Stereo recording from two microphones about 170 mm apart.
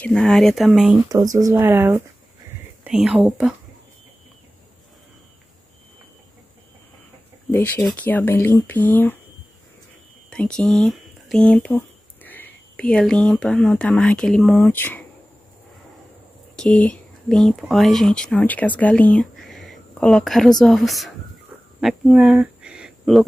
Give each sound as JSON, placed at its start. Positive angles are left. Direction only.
{"t": 0.0, "sound": "speech", "side_deg": 5}
{"t": 1.0, "sound": "speech", "side_deg": -20}
{"t": 7.5, "sound": "speech", "side_deg": 10}
{"t": 10.3, "sound": "speech", "side_deg": 5}
{"t": 16.5, "sound": "speech", "side_deg": 5}